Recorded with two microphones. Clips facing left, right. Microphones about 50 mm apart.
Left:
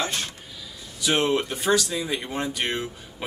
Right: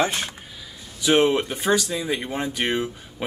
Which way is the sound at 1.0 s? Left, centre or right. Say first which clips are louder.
Right 4 dB; centre.